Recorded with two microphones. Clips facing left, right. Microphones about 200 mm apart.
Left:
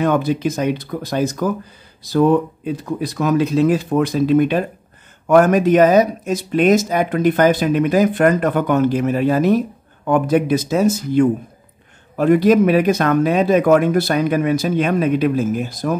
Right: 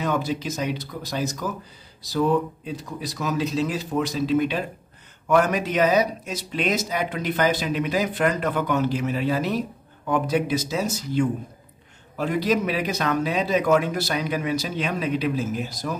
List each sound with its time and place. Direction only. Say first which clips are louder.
0.0 s speech: left 8 dB; 55° left (ahead or behind)